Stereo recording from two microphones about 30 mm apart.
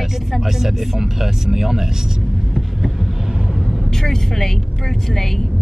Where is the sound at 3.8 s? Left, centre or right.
Centre.